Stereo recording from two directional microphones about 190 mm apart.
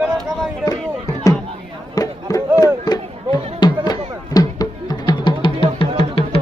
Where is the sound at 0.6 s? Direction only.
20° left (ahead or behind).